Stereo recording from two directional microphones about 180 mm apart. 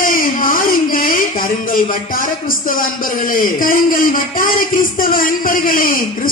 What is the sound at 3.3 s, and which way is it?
Speech, 50° left (ahead or behind).